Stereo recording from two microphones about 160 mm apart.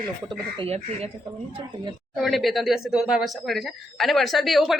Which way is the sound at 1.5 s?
30° right (ahead or behind).